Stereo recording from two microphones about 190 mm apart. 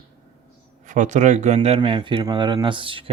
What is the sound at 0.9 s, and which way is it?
Speech, 40° right (ahead or behind).